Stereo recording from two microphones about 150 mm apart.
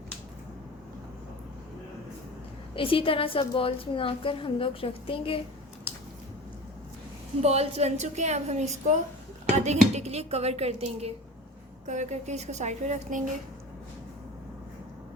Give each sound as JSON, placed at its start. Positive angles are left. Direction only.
{"t": 2.7, "sound": "a woman's voice", "side_deg": 35}
{"t": 7.4, "sound": "speech", "side_deg": -45}